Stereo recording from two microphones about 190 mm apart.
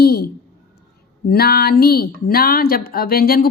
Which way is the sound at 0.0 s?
55° left (ahead or behind).